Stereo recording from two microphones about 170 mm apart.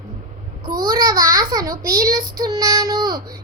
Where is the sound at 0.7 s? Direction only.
55° right (ahead or behind).